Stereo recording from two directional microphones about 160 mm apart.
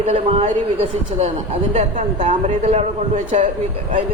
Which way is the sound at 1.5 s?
40° right (ahead or behind).